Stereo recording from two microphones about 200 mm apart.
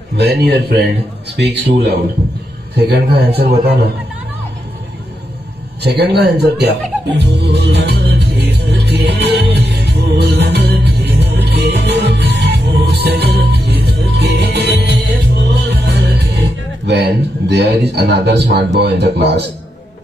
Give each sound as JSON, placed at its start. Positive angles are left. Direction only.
{"t": 0.1, "sound": "speech", "side_deg": -55}
{"t": 5.8, "sound": "speech", "side_deg": -55}
{"t": 7.2, "sound": "music", "side_deg": -60}
{"t": 18.8, "sound": "speech", "side_deg": -55}